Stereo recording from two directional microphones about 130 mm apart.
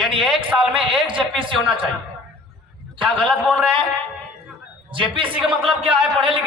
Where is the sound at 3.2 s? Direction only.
Centre (ahead or behind).